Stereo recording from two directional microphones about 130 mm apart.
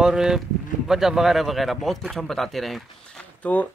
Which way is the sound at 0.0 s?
5° right (ahead or behind).